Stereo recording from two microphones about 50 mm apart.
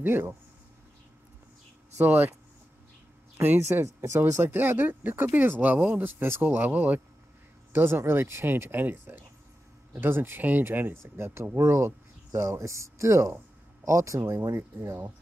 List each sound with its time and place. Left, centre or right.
0.0 s speech: right
2.0 s speech: right
3.3 s speech: right
3.8 s speech: right
4.4 s speech: right
5.6 s speech: right
6.0 s speech: right
6.4 s speech: right
7.7 s speech: right
9.9 s speech: right
11.0 s speech: right
12.3 s speech: right